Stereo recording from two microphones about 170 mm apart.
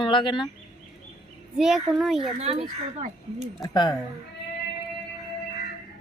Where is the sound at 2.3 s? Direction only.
40° right (ahead or behind).